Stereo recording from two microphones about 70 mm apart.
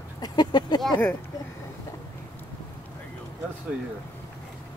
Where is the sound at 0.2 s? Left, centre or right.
Left.